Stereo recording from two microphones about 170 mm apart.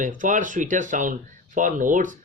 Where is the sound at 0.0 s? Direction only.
50° right (ahead or behind).